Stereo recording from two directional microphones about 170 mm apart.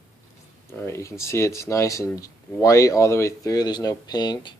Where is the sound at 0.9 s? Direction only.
15° left (ahead or behind).